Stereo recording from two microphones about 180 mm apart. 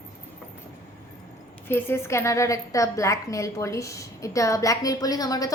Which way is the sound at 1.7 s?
10° left (ahead or behind).